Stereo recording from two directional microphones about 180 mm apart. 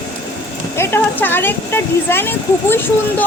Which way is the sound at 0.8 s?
10° left (ahead or behind).